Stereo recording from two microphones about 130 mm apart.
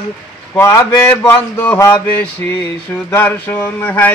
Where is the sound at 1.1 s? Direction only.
15° left (ahead or behind).